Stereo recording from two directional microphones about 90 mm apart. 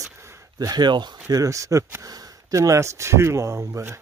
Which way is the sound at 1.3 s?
35° right (ahead or behind).